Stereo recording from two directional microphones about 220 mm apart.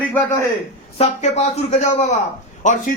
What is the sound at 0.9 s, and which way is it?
A man's voice, 30° left (ahead or behind).